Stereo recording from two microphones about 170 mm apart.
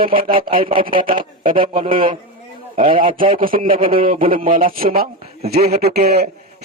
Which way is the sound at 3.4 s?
55° right (ahead or behind).